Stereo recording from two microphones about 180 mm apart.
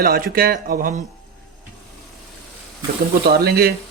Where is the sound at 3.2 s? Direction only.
60° right (ahead or behind).